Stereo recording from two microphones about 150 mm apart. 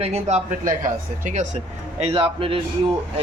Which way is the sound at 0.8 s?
55° right (ahead or behind).